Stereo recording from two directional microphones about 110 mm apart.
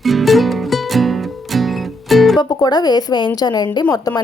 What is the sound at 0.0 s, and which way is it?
Music, centre (ahead or behind).